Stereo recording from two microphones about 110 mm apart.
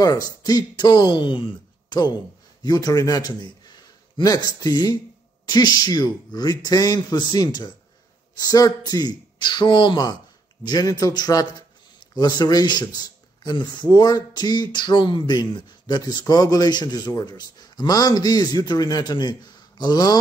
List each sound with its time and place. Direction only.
0.4 s speech: 40° left (ahead or behind)